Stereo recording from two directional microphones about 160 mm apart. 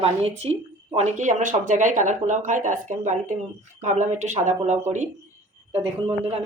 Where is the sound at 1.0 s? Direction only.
50° right (ahead or behind).